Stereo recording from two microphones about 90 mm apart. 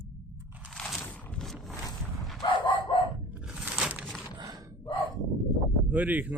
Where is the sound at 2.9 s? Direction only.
75° left (ahead or behind).